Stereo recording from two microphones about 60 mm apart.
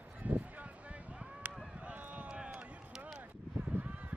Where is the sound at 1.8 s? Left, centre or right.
Right.